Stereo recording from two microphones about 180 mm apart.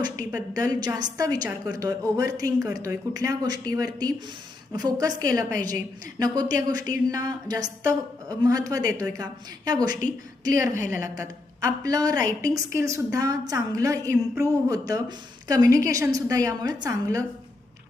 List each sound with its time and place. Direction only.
0.0 s a woman's voice: 20° right (ahead or behind)
10.4 s a woman's voice: 20° right (ahead or behind)